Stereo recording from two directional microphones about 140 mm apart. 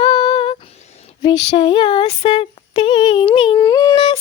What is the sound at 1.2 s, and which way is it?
Female singing, 30° left (ahead or behind).